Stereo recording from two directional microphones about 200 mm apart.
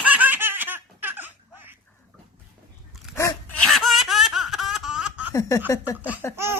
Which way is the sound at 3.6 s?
Centre (ahead or behind).